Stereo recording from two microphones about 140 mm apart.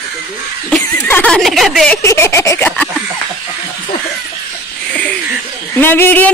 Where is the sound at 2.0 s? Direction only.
20° left (ahead or behind).